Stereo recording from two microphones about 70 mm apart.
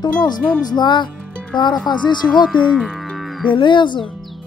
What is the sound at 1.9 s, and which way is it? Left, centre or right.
Music, left.